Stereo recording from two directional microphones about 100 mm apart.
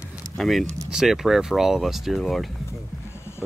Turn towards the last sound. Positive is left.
turn(degrees=25)  # may be behind; listen again after turning